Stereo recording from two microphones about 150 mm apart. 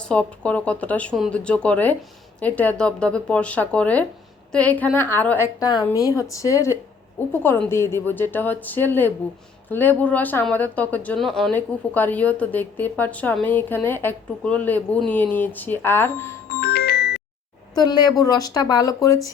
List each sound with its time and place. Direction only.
0.0 s a woman's voice: 10° left (ahead or behind)
5.5 s a woman's voice: 25° left (ahead or behind)
16.6 s music: 90° left
17.7 s a woman's voice: 30° left (ahead or behind)